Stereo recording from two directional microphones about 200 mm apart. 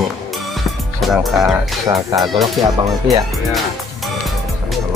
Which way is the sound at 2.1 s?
Centre (ahead or behind).